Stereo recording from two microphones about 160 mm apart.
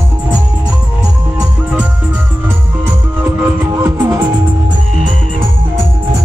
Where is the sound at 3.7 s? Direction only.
20° right (ahead or behind).